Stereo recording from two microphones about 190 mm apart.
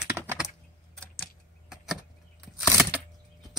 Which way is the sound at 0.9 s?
5° left (ahead or behind).